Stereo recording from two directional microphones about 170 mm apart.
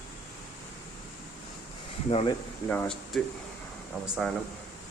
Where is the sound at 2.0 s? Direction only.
35° left (ahead or behind).